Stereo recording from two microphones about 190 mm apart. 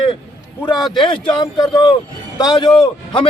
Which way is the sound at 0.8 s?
Centre (ahead or behind).